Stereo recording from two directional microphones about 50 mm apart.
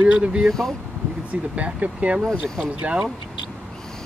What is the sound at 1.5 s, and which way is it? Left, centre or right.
Speech, right.